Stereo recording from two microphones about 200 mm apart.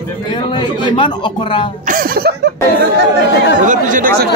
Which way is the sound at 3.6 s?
40° right (ahead or behind).